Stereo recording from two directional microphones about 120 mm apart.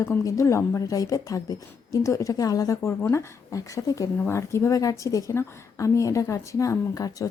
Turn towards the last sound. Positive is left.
turn(degrees=30)  # may be behind; listen again after turning